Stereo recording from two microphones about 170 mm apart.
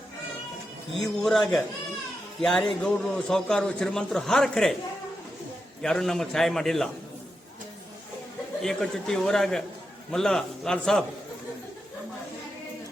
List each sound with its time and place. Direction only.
0.9 s a man's voice: centre (ahead or behind)
5.8 s a man's voice: 5° left (ahead or behind)
8.6 s a man's voice: centre (ahead or behind)